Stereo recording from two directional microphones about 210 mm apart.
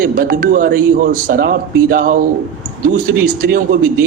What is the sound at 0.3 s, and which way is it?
Speech, 40° right (ahead or behind).